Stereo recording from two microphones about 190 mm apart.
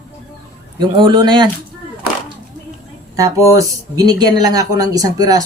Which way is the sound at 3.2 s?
15° right (ahead or behind).